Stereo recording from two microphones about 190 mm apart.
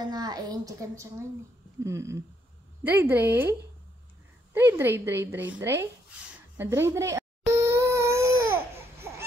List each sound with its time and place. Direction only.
0.0 s a woman's voice: 20° right (ahead or behind)
4.6 s a woman's voice: 10° right (ahead or behind)
6.5 s a sound: 10° right (ahead or behind)